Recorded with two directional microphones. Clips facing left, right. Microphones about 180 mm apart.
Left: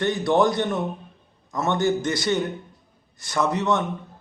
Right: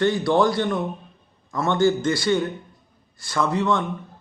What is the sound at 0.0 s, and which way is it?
A man's voice, 20° left (ahead or behind).